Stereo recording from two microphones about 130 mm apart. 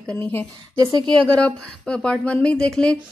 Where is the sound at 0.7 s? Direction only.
25° right (ahead or behind).